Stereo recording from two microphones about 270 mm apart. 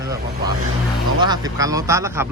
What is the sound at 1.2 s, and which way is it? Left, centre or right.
Speech, centre.